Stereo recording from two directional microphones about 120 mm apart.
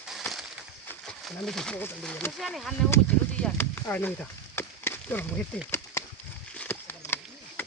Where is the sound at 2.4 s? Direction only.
Centre (ahead or behind).